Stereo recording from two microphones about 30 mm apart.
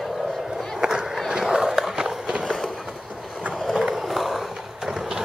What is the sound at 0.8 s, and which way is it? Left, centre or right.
Skateboard, right.